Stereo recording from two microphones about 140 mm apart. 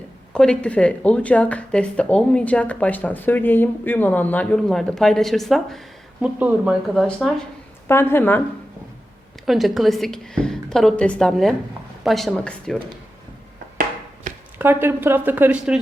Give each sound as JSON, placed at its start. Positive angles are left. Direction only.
{"t": 0.3, "sound": "a woman's voice", "side_deg": 5}
{"t": 7.9, "sound": "speech", "side_deg": 15}
{"t": 9.5, "sound": "a woman's voice", "side_deg": 0}
{"t": 14.6, "sound": "a woman's voice", "side_deg": -15}